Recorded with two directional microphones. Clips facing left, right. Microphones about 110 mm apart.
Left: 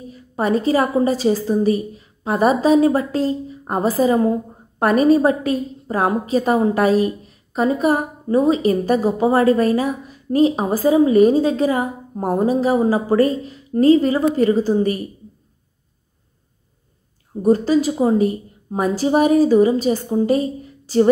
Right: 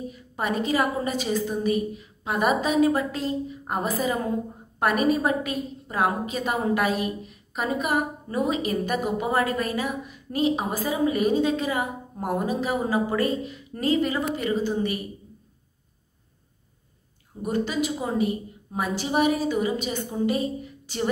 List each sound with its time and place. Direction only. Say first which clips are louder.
0.1 s a woman's voice: left 11 dB; 35° left (ahead or behind)
17.4 s a woman's voice: left 10 dB; 35° left (ahead or behind)